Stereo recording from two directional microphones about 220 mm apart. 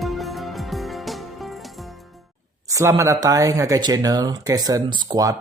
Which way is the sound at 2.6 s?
15° right (ahead or behind).